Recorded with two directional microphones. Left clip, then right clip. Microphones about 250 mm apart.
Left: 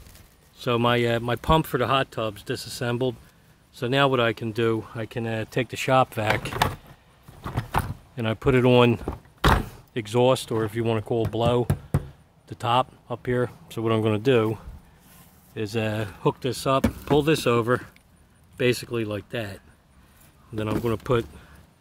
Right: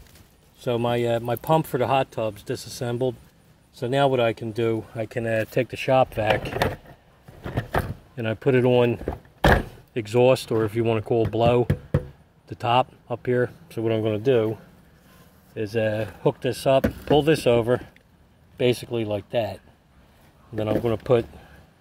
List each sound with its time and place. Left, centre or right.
0.6 s speech: centre
8.2 s speech: centre
8.7 s speech: left
9.5 s speech: centre